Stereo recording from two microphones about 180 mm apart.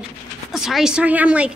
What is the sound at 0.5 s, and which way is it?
Speech, centre (ahead or behind).